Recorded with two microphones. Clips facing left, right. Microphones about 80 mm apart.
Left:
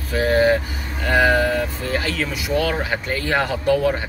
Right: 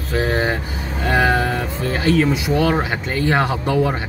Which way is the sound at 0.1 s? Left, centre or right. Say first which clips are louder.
Left 3 dB; right.